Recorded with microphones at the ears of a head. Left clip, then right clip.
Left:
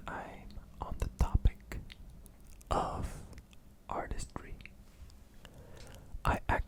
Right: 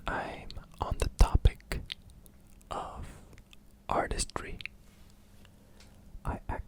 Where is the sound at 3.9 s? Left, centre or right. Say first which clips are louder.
Right 9 dB; right.